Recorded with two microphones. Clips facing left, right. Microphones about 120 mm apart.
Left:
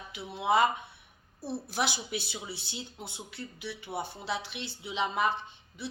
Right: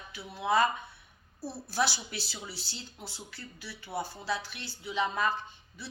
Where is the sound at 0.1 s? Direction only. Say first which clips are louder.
Left 1 dB; 25° left (ahead or behind).